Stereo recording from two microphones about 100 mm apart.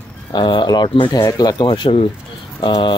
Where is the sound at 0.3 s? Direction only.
50° left (ahead or behind).